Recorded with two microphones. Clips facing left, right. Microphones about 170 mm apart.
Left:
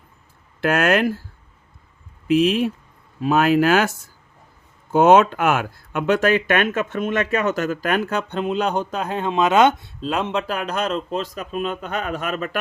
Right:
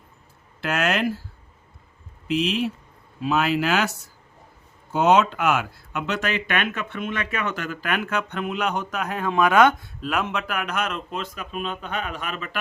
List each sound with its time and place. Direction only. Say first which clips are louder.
0.6 s speech: left 5 dB; 50° left (ahead or behind)
2.2 s speech: left 6 dB; 50° left (ahead or behind)